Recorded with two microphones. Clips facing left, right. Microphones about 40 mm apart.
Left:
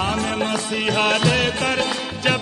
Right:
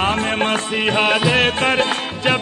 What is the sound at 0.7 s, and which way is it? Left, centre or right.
Music, right.